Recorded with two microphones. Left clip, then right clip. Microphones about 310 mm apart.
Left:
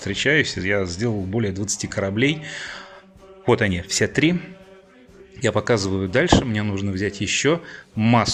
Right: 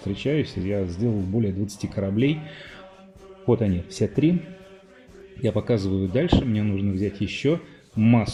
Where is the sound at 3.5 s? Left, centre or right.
Left.